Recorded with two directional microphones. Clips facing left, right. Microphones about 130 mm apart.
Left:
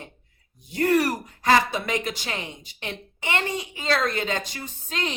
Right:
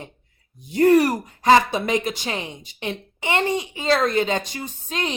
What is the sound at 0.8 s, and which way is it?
A woman's voice, 20° right (ahead or behind).